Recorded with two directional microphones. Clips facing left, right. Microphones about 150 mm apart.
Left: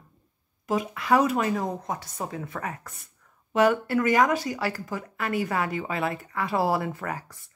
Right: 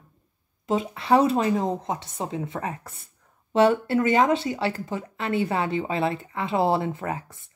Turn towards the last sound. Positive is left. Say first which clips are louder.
# right 3 dB
turn(degrees=-25)  # may be behind; listen again after turning